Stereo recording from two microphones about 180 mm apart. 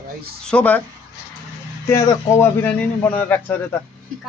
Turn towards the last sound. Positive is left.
turn(degrees=10)  # may be behind; listen again after turning